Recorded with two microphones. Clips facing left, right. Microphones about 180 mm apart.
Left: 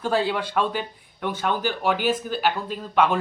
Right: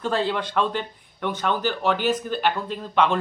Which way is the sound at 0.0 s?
10° left (ahead or behind).